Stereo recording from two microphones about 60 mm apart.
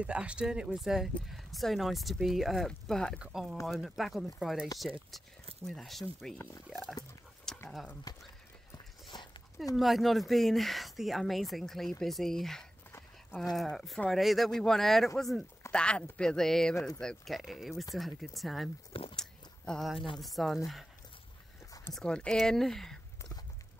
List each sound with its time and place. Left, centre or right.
0.0 s speech: centre
2.9 s speech: centre
3.2 s speech: centre
7.5 s a sound: centre
8.1 s speech: left
9.8 s speech: centre
15.7 s speech: centre
17.3 s speech: centre
19.1 s a sound: centre
19.8 s speech: centre
21.9 s speech: centre